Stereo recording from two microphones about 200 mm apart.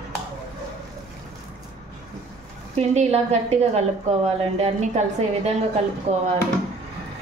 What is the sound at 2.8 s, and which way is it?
A woman's voice, 35° right (ahead or behind).